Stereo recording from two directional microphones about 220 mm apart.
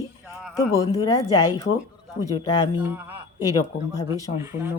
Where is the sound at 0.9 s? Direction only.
15° left (ahead or behind).